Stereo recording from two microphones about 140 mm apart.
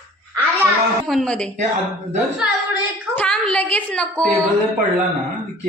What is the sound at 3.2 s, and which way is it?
Speech, 5° left (ahead or behind).